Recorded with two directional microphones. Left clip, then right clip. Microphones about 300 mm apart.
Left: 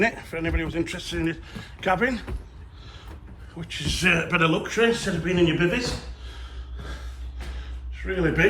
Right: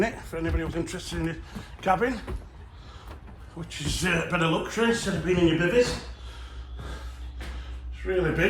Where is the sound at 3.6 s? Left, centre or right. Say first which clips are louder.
Left 6 dB; centre.